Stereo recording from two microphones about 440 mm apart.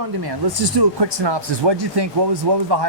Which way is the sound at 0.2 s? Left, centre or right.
Right.